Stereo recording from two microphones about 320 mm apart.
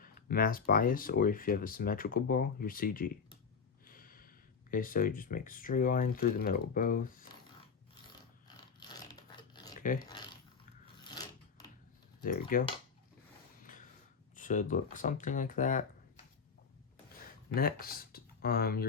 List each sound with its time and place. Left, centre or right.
0.0 s speech: left
3.8 s a sound: left
4.7 s speech: left
8.4 s crunch: centre
9.8 s speech: left
11.1 s filing: centre
12.2 s speech: left
13.7 s a sound: left
14.3 s speech: left
17.5 s speech: left